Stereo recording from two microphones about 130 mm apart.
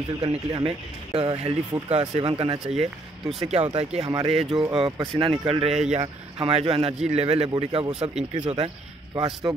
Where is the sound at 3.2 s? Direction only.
Centre (ahead or behind).